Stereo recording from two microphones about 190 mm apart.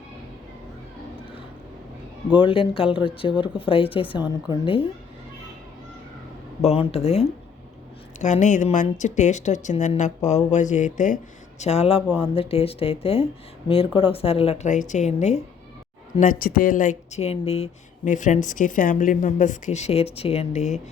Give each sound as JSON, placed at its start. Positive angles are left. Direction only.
{"t": 2.4, "sound": "speech", "side_deg": 30}
{"t": 6.6, "sound": "speech", "side_deg": 35}
{"t": 16.2, "sound": "speech", "side_deg": 45}